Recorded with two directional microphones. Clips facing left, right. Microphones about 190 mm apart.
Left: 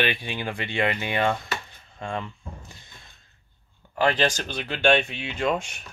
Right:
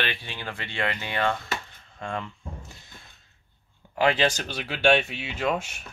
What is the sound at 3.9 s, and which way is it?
Speech, 10° right (ahead or behind).